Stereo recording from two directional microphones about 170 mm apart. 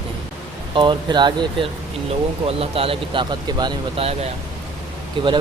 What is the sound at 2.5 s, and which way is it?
Speech, 35° right (ahead or behind).